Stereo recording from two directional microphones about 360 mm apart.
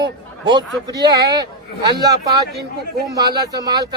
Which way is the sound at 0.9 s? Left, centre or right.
Centre.